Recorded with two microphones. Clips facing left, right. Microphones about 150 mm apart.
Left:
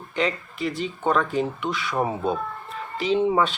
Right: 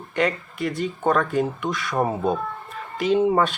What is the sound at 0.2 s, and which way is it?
Speech, 55° right (ahead or behind).